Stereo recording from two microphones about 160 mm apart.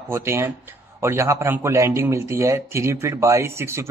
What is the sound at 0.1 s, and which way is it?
A man's voice, 15° right (ahead or behind).